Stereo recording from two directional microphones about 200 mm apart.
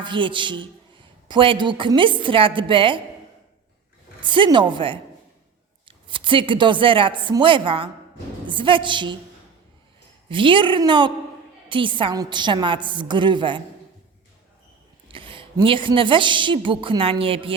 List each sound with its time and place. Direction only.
0.0 s a man's voice: 25° right (ahead or behind)
4.2 s a man's voice: 25° right (ahead or behind)
10.2 s a man's voice: 25° right (ahead or behind)
15.0 s a man's voice: 25° right (ahead or behind)